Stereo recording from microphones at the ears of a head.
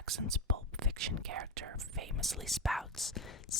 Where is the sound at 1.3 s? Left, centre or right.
Right.